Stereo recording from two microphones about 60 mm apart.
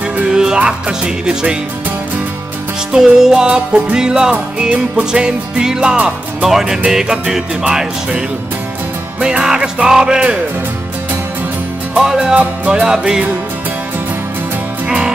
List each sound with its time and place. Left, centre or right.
0.3 s music: centre
2.9 s music: centre
9.2 s music: centre
12.0 s music: centre
12.4 s music: right
12.8 s music: centre